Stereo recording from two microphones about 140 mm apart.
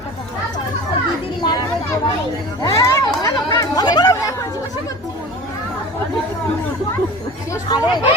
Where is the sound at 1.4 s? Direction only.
30° left (ahead or behind).